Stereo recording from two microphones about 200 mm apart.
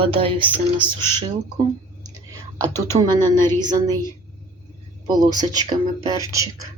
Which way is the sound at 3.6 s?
20° right (ahead or behind).